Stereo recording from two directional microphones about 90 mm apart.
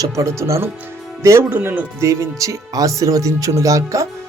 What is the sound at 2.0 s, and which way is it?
Speech, 35° right (ahead or behind).